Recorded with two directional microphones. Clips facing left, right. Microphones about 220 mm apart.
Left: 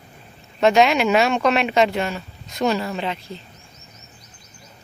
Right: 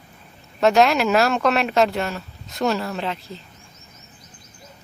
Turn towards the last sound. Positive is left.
turn(degrees=0)  # may be behind; listen again after turning